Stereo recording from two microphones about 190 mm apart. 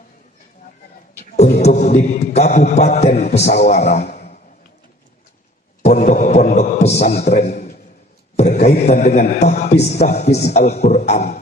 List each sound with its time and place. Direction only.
1.4 s a man's voice: 35° left (ahead or behind)
5.8 s a sound: 40° left (ahead or behind)
8.4 s a man's voice: 35° left (ahead or behind)